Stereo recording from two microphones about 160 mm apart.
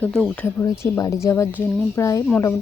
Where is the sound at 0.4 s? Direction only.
20° left (ahead or behind).